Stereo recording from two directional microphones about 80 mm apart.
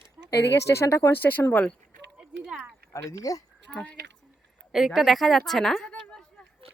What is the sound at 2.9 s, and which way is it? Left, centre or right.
Speech, left.